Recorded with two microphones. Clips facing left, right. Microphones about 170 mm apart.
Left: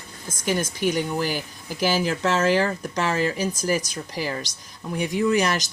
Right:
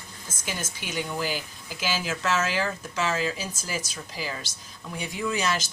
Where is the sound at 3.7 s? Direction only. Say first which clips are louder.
Left 7 dB; 15° left (ahead or behind).